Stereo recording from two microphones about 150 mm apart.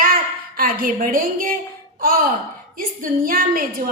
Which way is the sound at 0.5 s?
70° right (ahead or behind).